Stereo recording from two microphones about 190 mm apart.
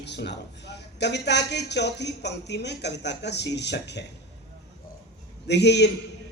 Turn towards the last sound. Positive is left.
turn(degrees=65)  # may be behind; listen again after turning